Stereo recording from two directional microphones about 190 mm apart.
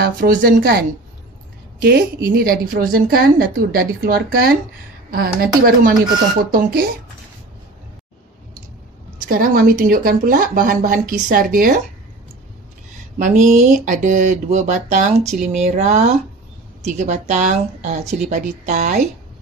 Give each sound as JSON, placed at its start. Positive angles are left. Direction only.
{"t": 0.0, "sound": "a woman's voice", "side_deg": -50}
{"t": 9.3, "sound": "a woman's voice", "side_deg": -45}
{"t": 13.2, "sound": "speech", "side_deg": -40}